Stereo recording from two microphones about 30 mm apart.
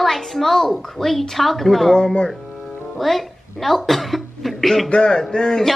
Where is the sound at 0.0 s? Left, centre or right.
Centre.